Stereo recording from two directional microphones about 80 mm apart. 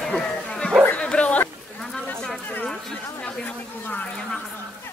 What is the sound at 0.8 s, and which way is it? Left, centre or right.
Bow-wow, centre.